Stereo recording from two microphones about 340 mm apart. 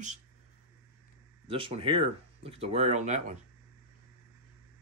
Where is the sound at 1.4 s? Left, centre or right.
Centre.